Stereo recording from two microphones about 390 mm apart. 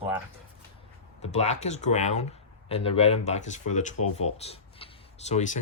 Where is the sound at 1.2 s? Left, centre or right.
Centre.